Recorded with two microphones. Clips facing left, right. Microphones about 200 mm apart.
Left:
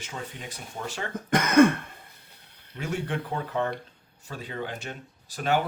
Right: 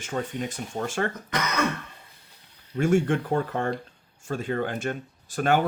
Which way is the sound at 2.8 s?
50° right (ahead or behind).